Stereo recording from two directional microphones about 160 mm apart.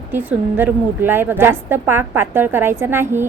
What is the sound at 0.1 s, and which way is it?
A woman's voice, 10° right (ahead or behind).